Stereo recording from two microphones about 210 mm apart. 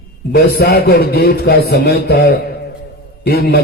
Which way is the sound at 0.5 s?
45° left (ahead or behind).